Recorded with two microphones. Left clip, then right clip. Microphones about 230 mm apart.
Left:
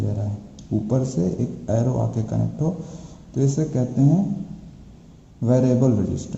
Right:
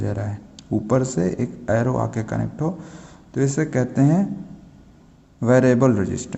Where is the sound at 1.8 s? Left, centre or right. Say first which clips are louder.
Right 3 dB; right.